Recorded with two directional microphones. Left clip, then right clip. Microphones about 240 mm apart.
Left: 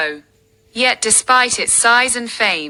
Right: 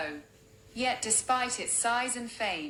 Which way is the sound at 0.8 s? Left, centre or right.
Left.